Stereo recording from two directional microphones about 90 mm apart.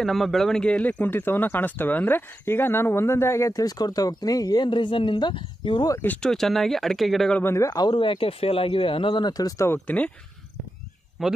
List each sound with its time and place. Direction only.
0.0 s speech: centre (ahead or behind); by 5.9 s 65° left (ahead or behind)
6.2 s speech: 5° left (ahead or behind)
7.5 s speech: 45° left (ahead or behind)
7.9 s speech: 70° left (ahead or behind); by 9.7 s 45° left (ahead or behind)
9.7 s speech: 15° left (ahead or behind)
11.2 s speech: centre (ahead or behind)